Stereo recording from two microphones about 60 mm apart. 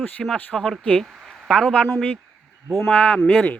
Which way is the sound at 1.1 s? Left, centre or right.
Centre.